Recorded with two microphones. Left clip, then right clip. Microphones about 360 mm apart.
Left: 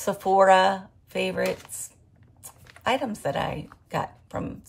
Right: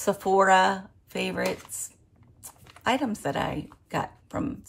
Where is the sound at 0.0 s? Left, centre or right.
Centre.